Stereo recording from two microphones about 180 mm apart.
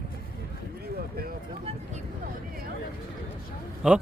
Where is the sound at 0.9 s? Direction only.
55° right (ahead or behind).